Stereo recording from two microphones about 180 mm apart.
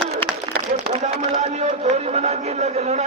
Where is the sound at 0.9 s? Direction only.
40° right (ahead or behind).